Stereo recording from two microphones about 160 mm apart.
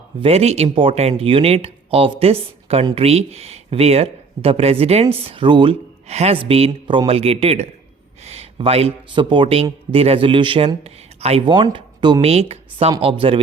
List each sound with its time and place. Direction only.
0.2 s speech: 40° right (ahead or behind)